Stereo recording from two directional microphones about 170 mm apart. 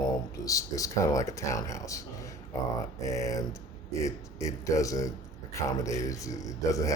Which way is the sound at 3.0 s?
20° left (ahead or behind).